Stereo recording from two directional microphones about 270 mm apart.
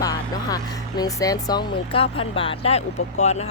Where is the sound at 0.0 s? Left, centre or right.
Centre.